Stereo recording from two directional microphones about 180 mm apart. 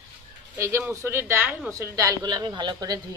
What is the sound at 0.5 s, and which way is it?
A man's voice, 15° right (ahead or behind).